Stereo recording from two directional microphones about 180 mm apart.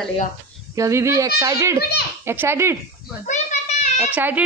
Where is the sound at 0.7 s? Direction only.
15° right (ahead or behind).